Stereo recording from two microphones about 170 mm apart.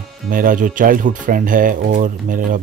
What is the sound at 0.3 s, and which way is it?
Speech, 55° right (ahead or behind).